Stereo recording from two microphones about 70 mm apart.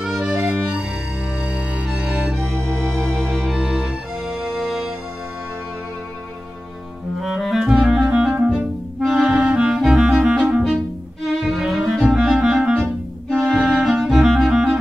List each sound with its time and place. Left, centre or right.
0.3 s music: right
1.9 s music: centre
2.9 s music: centre
3.5 s music: centre
7.2 s clarinet: centre
8.1 s music: centre
9.4 s music: centre
9.7 s music: centre
11.4 s clarinet: centre
13.6 s music: centre
14.0 s clarinet: centre